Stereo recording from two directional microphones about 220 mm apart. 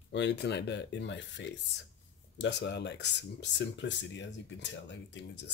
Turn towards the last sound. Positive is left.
turn(degrees=55)  # may be behind; listen again after turning